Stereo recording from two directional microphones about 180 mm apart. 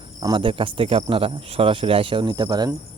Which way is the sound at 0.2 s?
25° right (ahead or behind).